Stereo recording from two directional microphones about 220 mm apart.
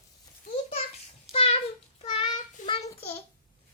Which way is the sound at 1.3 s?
25° left (ahead or behind).